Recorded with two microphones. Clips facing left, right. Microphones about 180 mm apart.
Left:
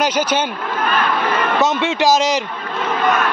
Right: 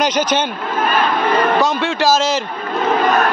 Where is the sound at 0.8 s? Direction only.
35° right (ahead or behind).